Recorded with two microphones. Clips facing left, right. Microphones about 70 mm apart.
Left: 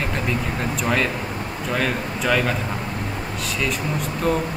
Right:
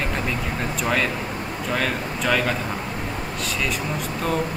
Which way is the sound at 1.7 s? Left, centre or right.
Centre.